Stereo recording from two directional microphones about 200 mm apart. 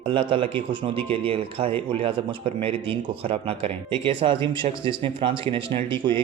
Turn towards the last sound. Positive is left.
turn(degrees=-25)  # may be behind; listen again after turning